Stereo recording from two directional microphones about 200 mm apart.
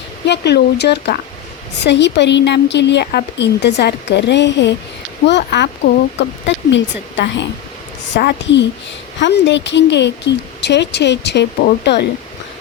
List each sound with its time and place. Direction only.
0.3 s speech: 55° left (ahead or behind)